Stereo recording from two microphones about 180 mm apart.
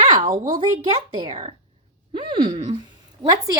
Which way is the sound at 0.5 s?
30° right (ahead or behind).